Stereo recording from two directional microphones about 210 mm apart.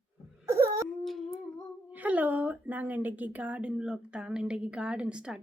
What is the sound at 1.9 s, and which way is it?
Speech, 10° right (ahead or behind).